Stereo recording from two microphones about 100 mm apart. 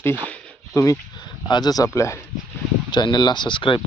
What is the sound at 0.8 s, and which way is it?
Speech, 30° left (ahead or behind).